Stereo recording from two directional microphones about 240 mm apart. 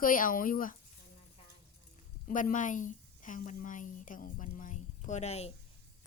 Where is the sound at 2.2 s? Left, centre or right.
Left.